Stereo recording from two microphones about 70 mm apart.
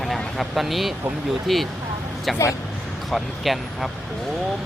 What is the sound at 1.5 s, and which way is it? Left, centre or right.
Speech, centre.